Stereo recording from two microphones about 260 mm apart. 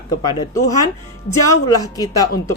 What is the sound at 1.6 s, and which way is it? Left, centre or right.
Speech, centre.